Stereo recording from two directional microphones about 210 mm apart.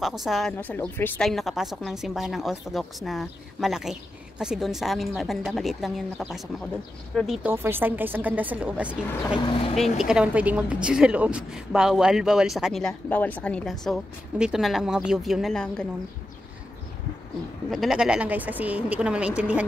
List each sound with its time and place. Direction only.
0.0 s speech: centre (ahead or behind)
7.5 s speech: 10° right (ahead or behind)
9.4 s speech: 25° left (ahead or behind)
9.9 s speech: 5° right (ahead or behind)
17.6 s speech: centre (ahead or behind)